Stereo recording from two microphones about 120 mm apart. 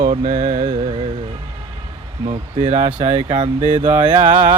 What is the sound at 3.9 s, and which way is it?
Music, 20° right (ahead or behind).